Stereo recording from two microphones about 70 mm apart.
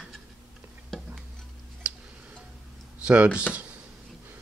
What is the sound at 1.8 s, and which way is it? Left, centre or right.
Music, centre.